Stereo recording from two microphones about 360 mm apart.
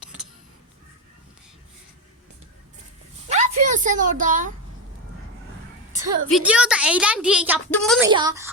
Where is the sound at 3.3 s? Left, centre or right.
Centre.